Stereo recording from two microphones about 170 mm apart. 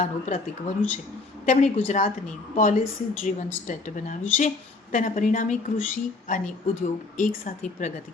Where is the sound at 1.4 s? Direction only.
45° left (ahead or behind).